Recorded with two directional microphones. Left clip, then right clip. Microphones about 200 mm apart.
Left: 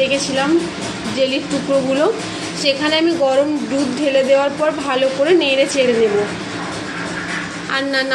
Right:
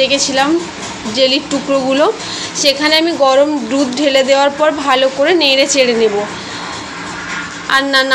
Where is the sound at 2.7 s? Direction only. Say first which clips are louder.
Right 4 dB; 15° right (ahead or behind).